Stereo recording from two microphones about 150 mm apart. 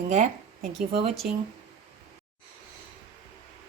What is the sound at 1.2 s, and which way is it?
Speech, 65° right (ahead or behind).